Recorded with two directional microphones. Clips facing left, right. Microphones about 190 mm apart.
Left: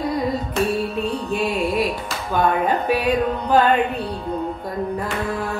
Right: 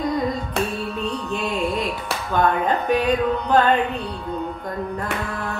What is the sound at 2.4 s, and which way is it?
Speech, 10° left (ahead or behind).